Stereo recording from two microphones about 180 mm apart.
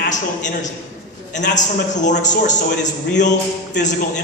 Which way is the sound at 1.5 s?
40° left (ahead or behind).